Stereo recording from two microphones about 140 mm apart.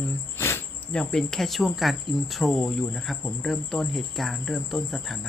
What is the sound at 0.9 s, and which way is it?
Cricket, 5° left (ahead or behind).